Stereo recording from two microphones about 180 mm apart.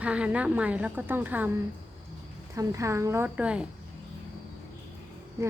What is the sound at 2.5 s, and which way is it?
A woman's voice, 15° right (ahead or behind).